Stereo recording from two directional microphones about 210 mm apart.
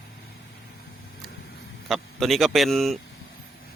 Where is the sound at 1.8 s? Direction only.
Centre (ahead or behind).